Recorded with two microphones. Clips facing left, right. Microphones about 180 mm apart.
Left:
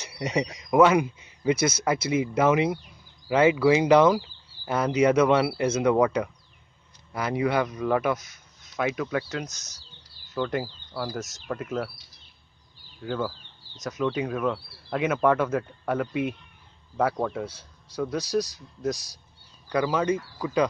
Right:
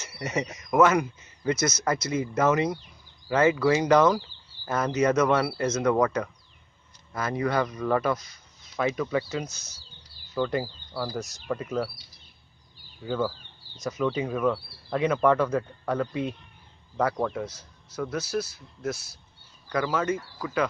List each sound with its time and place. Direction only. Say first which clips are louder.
0.0 s speech: left 3 dB; 15° left (ahead or behind)
10.9 s speech: even; 15° left (ahead or behind)
11.1 s speech: right 1 dB; centre (ahead or behind)
13.8 s speech: even; centre (ahead or behind)
17.5 s speech: left 1 dB; 30° left (ahead or behind)
17.9 s speech: left 3 dB; 10° left (ahead or behind)